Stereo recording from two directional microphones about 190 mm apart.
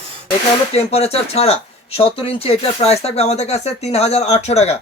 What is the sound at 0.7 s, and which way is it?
Speech, 30° left (ahead or behind).